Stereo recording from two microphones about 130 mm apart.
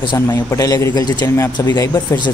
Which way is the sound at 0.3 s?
25° left (ahead or behind).